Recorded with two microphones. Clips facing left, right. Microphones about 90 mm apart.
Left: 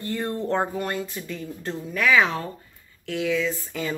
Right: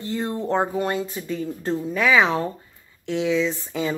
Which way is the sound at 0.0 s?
15° right (ahead or behind).